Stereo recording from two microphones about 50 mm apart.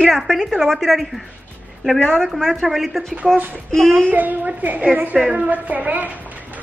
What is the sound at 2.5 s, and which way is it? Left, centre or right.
Speech, centre.